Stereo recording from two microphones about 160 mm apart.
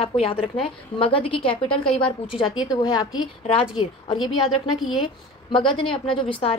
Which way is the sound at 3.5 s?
40° left (ahead or behind).